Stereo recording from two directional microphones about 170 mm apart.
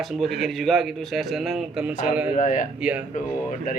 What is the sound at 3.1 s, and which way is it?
Speech, 50° left (ahead or behind).